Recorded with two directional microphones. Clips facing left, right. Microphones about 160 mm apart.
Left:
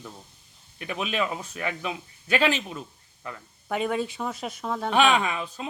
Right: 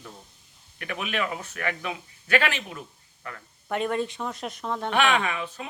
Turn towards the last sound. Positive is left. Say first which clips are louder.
# left 1 dB
turn(degrees=15)  # may be behind; listen again after turning